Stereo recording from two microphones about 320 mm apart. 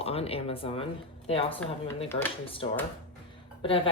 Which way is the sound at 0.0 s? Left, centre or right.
Centre.